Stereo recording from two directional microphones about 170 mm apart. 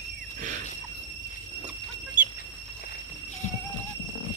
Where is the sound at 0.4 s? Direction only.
50° right (ahead or behind).